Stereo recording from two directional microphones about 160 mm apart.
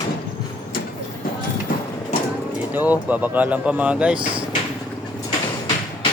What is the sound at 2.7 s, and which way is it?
Speech, 10° right (ahead or behind).